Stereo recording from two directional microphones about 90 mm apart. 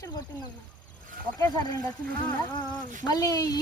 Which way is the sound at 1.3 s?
40° left (ahead or behind).